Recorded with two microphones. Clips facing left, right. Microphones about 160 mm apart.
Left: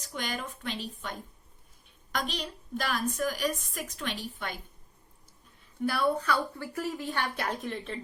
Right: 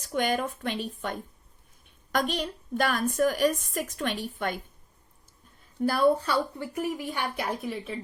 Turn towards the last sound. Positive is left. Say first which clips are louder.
# right 2 dB
turn(degrees=-5)  # may be behind; listen again after turning